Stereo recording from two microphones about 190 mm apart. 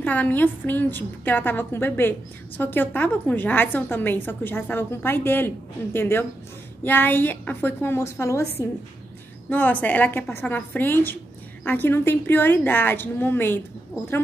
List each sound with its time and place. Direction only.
0.0 s a woman's voice: 10° left (ahead or behind)